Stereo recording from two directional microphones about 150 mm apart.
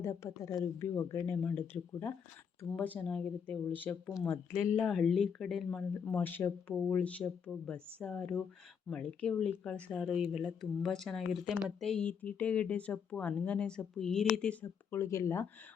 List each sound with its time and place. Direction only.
0.0 s speech: 20° left (ahead or behind)
4.8 s speech: centre (ahead or behind)
10.2 s speech: 5° right (ahead or behind); by 15.4 s 20° left (ahead or behind)